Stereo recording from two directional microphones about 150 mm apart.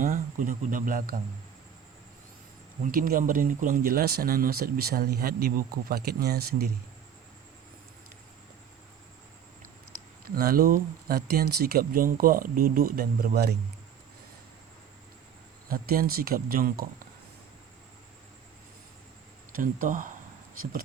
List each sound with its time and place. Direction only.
0.0 s speech: 60° right (ahead or behind)
2.8 s speech: 70° right (ahead or behind); by 6.7 s 90° right
10.2 s speech: 80° right
15.7 s speech: 75° right (ahead or behind)
19.5 s speech: 65° right (ahead or behind)